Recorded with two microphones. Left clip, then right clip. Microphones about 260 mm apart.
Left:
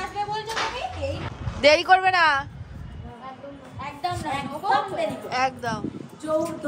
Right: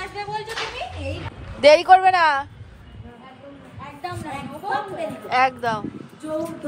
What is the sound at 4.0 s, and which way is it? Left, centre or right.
A woman's voice, centre.